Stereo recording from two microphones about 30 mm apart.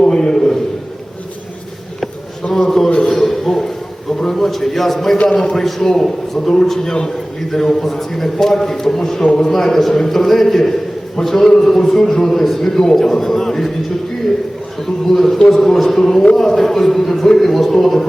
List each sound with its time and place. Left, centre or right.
0.1 s a sound: left
2.6 s a sound: centre
4.4 s a man's voice: centre
5.1 s a man's voice: left
5.4 s a man's voice: centre
7.5 s a man's voice: centre
14.8 s a man's voice: centre